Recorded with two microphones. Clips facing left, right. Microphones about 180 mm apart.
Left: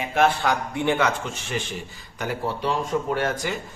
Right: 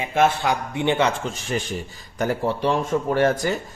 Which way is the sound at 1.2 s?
40° right (ahead or behind).